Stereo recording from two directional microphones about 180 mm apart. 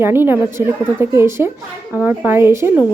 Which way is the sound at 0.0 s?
10° right (ahead or behind).